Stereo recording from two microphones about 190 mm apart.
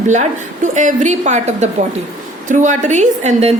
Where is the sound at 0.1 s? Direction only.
40° right (ahead or behind).